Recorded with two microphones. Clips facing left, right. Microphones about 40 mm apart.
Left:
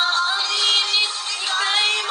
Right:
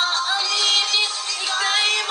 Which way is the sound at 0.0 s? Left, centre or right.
Left.